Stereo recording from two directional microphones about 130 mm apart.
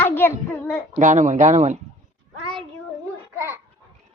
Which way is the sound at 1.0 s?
75° right (ahead or behind).